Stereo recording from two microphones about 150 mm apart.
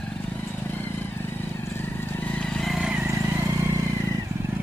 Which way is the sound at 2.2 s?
10° left (ahead or behind).